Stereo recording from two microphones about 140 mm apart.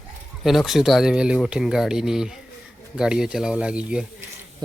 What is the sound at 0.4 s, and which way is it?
Speech, centre (ahead or behind).